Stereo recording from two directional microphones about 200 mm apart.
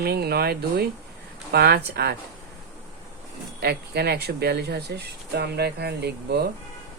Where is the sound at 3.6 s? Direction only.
55° right (ahead or behind).